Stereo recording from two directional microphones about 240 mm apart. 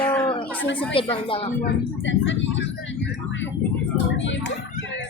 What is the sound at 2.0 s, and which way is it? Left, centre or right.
Speech, left.